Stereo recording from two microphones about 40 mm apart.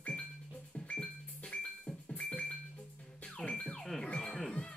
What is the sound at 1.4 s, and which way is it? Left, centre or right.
Music, left.